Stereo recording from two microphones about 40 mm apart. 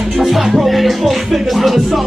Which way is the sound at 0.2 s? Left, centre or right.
Centre.